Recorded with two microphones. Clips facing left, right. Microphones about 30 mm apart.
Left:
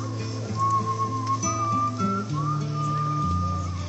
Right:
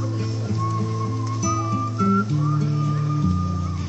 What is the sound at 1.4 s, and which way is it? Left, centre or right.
Music, centre.